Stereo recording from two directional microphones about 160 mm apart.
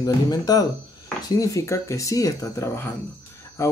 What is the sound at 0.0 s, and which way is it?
Speech, 25° left (ahead or behind).